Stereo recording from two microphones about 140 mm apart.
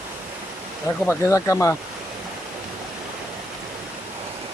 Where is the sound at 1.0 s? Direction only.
20° left (ahead or behind).